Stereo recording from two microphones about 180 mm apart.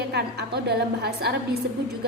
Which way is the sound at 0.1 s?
65° right (ahead or behind).